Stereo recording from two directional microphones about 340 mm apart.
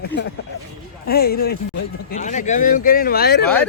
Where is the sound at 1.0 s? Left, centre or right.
Left.